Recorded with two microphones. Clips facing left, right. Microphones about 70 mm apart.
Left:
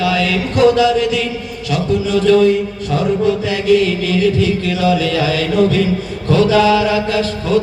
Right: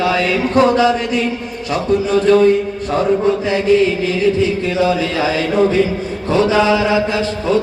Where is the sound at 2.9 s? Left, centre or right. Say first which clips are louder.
Right 1 dB; right.